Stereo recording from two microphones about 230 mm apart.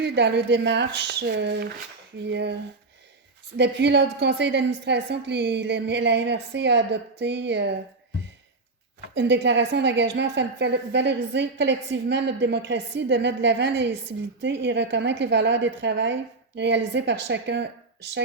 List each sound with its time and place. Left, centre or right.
0.0 s a woman's voice: right
3.6 s a woman's voice: right
9.1 s a woman's voice: right